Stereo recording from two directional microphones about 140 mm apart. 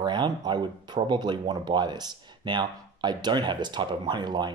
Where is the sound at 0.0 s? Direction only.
30° right (ahead or behind).